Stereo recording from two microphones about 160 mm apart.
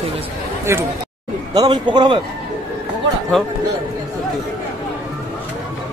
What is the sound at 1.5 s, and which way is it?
Speech, 30° right (ahead or behind).